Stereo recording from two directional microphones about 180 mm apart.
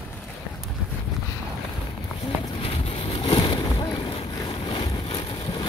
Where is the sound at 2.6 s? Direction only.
30° left (ahead or behind).